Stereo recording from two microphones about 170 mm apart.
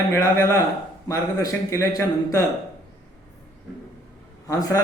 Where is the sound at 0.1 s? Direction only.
15° left (ahead or behind).